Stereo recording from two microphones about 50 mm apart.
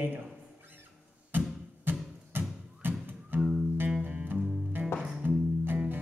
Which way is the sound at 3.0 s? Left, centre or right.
Right.